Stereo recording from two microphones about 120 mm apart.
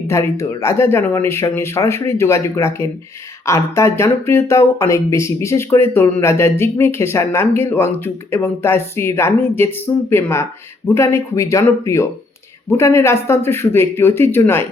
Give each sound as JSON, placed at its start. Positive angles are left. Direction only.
{"t": 0.1, "sound": "speech", "side_deg": 25}